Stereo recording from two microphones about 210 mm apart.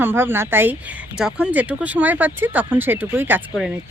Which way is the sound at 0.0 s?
10° right (ahead or behind).